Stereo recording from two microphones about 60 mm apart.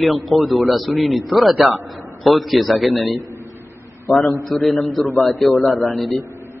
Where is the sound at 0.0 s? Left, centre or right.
Centre.